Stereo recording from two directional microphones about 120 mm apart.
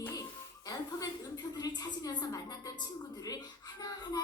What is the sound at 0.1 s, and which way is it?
Music, 30° left (ahead or behind).